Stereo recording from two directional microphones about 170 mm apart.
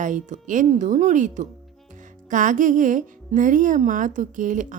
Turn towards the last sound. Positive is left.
turn(degrees=-50)  # may be behind; listen again after turning